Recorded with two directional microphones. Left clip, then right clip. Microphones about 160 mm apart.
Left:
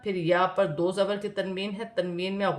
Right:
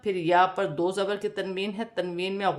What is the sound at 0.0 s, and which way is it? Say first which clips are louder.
A man's voice: right 3 dB; 20° right (ahead or behind).